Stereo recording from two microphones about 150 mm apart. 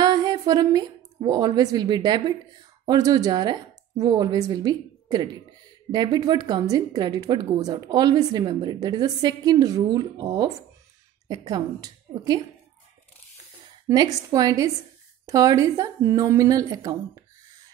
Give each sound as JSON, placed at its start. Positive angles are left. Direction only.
{"t": 0.0, "sound": "a woman's voice", "side_deg": -25}
{"t": 13.8, "sound": "a woman's voice", "side_deg": -25}